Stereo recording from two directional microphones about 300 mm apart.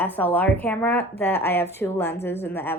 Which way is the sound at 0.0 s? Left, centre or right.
Centre.